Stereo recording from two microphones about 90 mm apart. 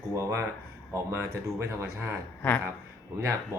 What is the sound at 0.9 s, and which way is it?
Speech, 30° right (ahead or behind).